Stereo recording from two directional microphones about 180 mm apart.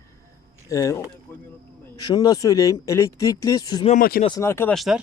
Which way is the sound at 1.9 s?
25° left (ahead or behind).